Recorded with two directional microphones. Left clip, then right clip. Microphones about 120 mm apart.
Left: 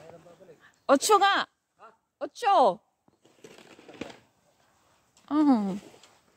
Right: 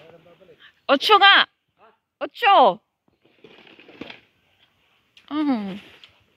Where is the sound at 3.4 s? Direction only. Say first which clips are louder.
Right 3 dB; 90° right.